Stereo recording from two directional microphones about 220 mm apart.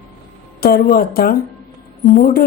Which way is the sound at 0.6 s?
45° left (ahead or behind).